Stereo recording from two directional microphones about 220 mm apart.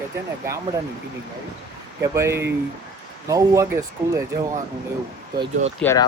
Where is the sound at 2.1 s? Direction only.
10° right (ahead or behind).